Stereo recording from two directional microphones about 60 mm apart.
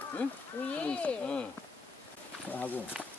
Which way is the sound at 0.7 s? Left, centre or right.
Left.